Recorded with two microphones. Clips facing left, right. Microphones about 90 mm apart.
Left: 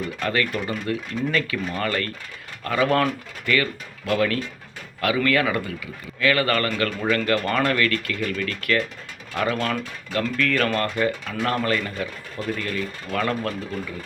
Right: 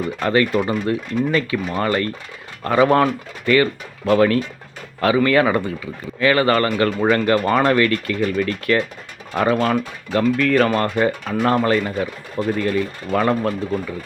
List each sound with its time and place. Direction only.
0.2 s speech: 30° right (ahead or behind)